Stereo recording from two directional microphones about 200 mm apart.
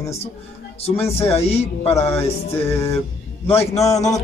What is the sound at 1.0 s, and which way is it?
Speech, 30° left (ahead or behind).